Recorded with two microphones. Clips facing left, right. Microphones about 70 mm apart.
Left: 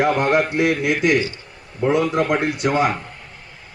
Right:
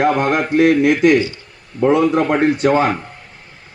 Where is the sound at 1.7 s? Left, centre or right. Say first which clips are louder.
Right 5 dB; right.